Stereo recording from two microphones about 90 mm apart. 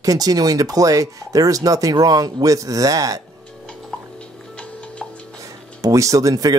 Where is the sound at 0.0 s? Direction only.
45° right (ahead or behind).